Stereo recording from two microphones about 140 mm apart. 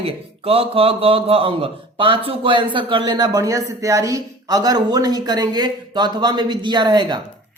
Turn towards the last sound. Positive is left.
turn(degrees=-30)  # may be behind; listen again after turning